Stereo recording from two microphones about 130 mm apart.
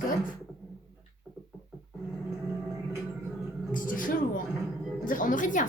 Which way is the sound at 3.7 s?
90° left.